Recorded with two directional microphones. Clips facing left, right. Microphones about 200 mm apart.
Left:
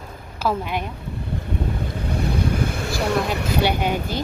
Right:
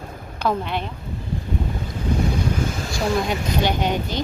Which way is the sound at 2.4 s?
60° left (ahead or behind).